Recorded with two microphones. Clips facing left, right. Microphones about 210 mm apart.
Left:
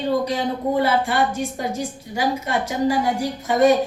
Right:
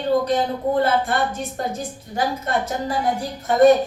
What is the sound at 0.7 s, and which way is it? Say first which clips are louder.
A woman's voice: even; 10° left (ahead or behind).